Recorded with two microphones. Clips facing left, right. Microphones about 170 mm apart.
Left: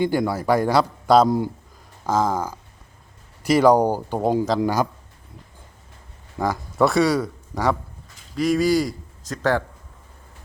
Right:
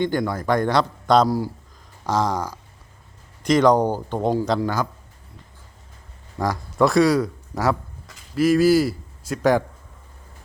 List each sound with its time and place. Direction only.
0.0 s a man's voice: 5° left (ahead or behind)
6.4 s a man's voice: centre (ahead or behind)